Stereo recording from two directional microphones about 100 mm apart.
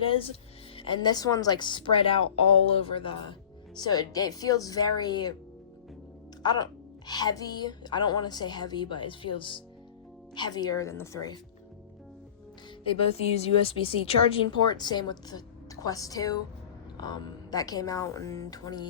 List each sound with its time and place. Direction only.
0.0 s speech: 65° left (ahead or behind)
1.0 s a woman's voice: 40° left (ahead or behind); by 3.3 s 55° left (ahead or behind)
3.8 s a woman's voice: 45° left (ahead or behind)
6.4 s a woman's voice: 45° left (ahead or behind)
10.3 s a woman's voice: 45° left (ahead or behind); by 11.2 s 30° left (ahead or behind)
12.8 s a woman's voice: 75° left (ahead or behind)
14.7 s a woman's voice: 45° left (ahead or behind)